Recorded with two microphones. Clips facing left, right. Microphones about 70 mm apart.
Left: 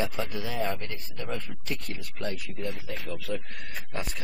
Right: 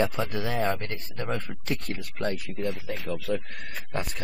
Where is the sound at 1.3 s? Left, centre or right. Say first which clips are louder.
Right 4 dB; right.